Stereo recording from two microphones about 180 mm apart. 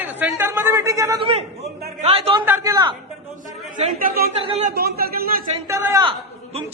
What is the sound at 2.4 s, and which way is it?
Speech, 15° right (ahead or behind).